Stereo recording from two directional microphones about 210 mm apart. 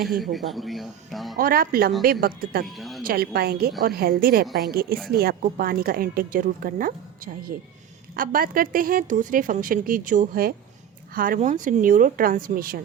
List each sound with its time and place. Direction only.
0.3 s speech: centre (ahead or behind)
1.4 s a woman's voice: 45° right (ahead or behind)
2.6 s speech: centre (ahead or behind)
3.1 s a woman's voice: 45° right (ahead or behind)